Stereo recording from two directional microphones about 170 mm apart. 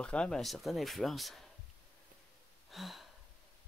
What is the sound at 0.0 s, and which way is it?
Speech, 5° left (ahead or behind).